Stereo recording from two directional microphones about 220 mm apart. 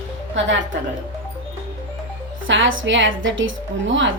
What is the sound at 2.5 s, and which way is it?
A woman's voice, 60° right (ahead or behind).